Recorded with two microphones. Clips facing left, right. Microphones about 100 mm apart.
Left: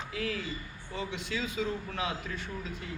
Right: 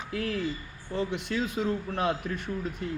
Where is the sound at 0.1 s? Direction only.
45° right (ahead or behind).